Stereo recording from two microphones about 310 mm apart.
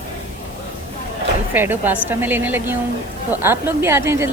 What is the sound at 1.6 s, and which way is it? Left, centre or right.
Speech, centre.